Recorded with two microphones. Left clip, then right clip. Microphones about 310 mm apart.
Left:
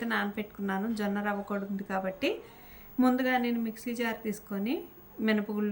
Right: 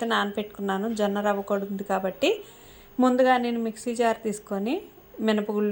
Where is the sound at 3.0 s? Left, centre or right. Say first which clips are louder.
Right 7 dB; centre.